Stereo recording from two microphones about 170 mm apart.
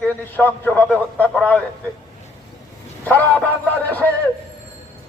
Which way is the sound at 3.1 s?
10° left (ahead or behind).